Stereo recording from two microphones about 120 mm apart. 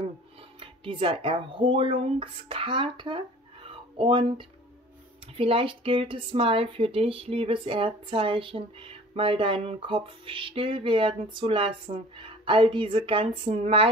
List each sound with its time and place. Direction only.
0.6 s speech: 45° right (ahead or behind)